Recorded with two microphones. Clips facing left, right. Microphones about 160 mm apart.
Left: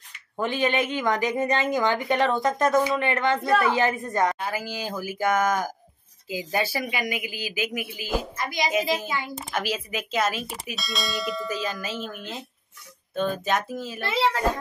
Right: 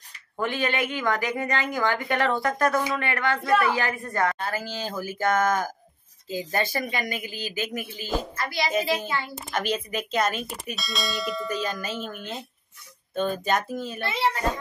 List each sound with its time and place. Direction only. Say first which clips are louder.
0.4 s a woman's voice: left 2 dB; 20° left (ahead or behind)
8.4 s a woman's voice: left 1 dB; 20° left (ahead or behind); by 14.0 s centre (ahead or behind)